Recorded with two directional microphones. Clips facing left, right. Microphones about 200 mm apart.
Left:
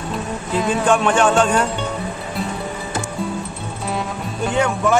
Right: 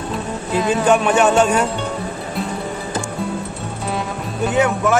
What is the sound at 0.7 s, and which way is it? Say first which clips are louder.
Speech: right 2 dB; 5° right (ahead or behind).